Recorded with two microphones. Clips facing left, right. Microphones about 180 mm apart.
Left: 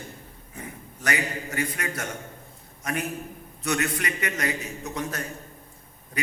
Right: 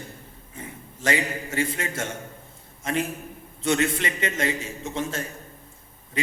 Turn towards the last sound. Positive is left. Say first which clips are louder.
# right 3 dB
turn(degrees=-25)  # may be behind; listen again after turning